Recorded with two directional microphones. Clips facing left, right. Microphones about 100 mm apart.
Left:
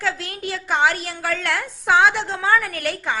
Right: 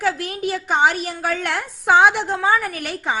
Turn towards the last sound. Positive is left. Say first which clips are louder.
# even
turn(degrees=-15)  # may be behind; listen again after turning